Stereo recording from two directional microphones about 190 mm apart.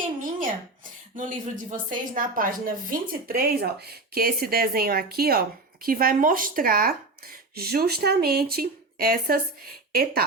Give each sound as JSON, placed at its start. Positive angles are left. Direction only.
{"t": 1.1, "sound": "speech", "side_deg": -45}